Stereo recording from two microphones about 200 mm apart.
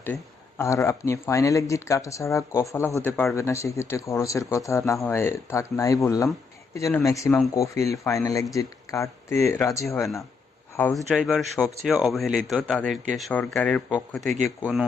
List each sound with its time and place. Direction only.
0.6 s speech: 15° left (ahead or behind)